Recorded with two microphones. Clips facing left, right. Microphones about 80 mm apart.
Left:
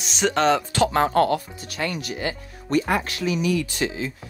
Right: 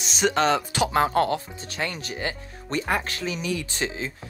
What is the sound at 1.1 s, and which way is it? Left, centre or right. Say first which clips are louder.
Speech: left 3 dB; right.